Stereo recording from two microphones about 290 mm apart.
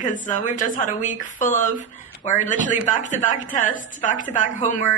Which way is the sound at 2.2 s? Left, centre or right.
Left.